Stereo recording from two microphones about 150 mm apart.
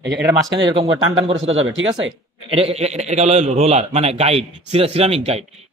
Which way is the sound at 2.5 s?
40° right (ahead or behind).